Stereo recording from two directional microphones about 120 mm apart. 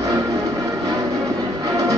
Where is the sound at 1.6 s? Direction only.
30° right (ahead or behind).